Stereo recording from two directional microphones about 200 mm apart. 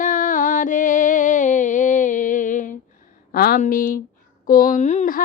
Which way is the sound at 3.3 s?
50° left (ahead or behind).